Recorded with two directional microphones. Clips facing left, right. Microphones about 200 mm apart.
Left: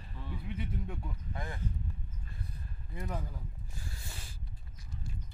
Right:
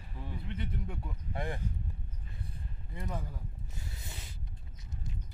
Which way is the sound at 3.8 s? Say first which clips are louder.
Even; 20° right (ahead or behind).